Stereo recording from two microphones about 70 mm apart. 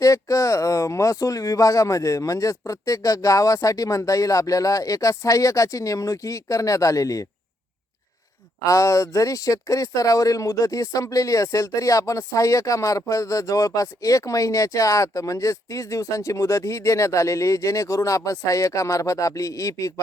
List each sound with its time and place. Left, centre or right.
0.0 s speech: left
8.6 s speech: left